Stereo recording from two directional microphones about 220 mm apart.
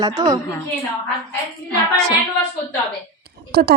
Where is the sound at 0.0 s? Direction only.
15° right (ahead or behind).